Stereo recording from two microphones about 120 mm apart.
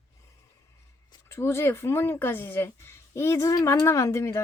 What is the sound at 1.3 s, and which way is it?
Speech, 20° left (ahead or behind).